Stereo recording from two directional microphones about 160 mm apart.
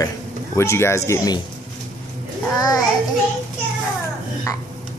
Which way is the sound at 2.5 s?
25° left (ahead or behind).